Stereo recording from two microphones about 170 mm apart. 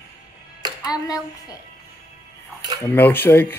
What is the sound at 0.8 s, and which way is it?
Child singing, 20° left (ahead or behind).